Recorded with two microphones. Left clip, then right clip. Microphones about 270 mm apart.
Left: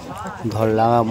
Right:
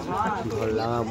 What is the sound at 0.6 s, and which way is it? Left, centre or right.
Speech, left.